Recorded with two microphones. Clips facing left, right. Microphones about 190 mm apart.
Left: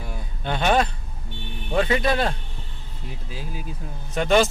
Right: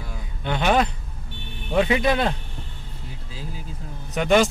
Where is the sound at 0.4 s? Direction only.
15° right (ahead or behind).